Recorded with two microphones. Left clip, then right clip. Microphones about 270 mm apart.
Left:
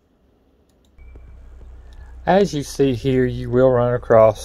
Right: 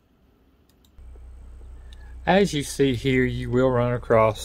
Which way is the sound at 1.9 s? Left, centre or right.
Centre.